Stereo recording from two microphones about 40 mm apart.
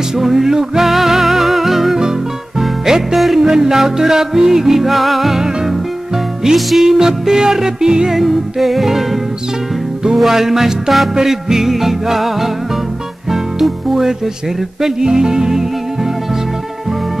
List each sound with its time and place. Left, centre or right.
0.1 s music: centre
2.0 s music: centre
8.1 s music: centre
13.3 s speech: centre
14.8 s music: centre